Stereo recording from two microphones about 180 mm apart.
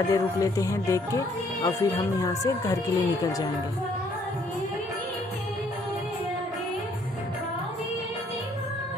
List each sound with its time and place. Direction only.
0.1 s speech: 20° left (ahead or behind)